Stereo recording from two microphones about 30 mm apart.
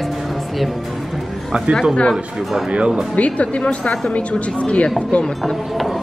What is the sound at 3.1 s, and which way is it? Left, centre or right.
A woman's voice, left.